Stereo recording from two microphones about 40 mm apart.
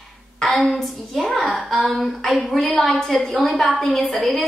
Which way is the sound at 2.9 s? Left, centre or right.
Centre.